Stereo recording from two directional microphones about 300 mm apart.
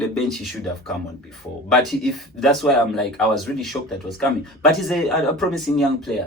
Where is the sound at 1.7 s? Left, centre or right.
Centre.